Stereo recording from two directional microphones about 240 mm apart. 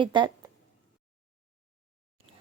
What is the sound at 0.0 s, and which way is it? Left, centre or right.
Speech, centre.